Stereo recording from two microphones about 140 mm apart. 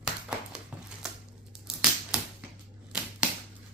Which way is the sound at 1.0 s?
5° right (ahead or behind).